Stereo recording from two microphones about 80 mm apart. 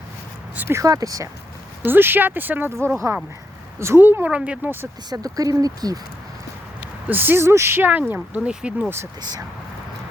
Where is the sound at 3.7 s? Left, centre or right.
Right.